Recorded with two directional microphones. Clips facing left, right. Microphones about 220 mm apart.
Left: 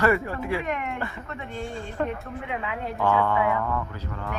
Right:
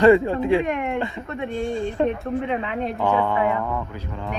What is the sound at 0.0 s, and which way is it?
Speech, 20° right (ahead or behind).